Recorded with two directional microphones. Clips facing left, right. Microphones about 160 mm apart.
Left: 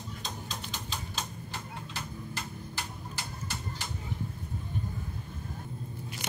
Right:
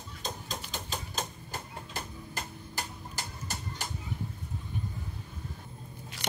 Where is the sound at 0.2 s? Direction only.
45° right (ahead or behind).